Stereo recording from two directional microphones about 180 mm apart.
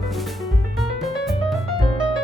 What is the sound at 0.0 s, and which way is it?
Music, centre (ahead or behind).